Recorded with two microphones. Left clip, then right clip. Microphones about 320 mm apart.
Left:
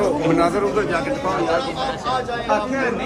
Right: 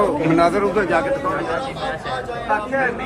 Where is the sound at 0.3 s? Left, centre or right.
Right.